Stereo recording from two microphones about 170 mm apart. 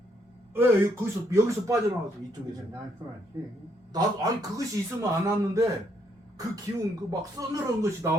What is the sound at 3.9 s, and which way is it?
Speech, 25° right (ahead or behind).